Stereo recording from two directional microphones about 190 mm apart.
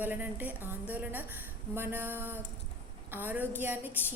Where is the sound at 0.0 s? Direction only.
10° right (ahead or behind).